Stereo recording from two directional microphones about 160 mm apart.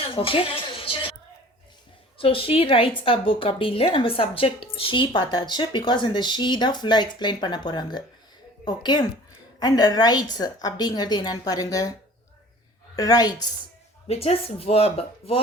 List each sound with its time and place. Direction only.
0.0 s music: 35° left (ahead or behind)
2.2 s speech: 35° left (ahead or behind)
13.0 s speech: 25° left (ahead or behind)
14.1 s speech: 40° left (ahead or behind)